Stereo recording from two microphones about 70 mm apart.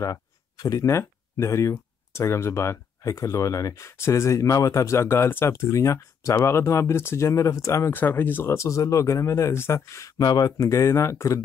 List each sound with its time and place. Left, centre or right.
0.6 s speech: left
0.8 s speech: left
7.9 s speech: left
10.1 s speech: left
10.6 s speech: left